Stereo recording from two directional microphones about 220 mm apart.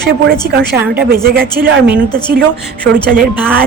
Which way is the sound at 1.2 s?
45° right (ahead or behind).